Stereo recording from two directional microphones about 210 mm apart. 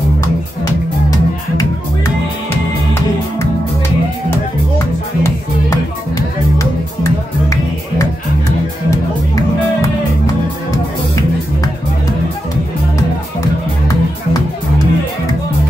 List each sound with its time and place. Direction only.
5.2 s music: 15° left (ahead or behind)
8.9 s music: 15° left (ahead or behind)
13.4 s music: 15° left (ahead or behind)